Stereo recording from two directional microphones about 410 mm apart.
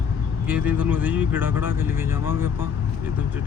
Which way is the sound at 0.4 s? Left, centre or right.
Centre.